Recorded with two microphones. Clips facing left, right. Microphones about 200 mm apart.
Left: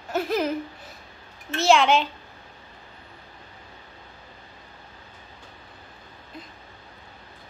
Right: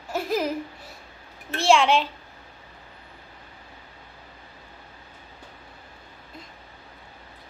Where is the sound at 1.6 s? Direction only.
Centre (ahead or behind).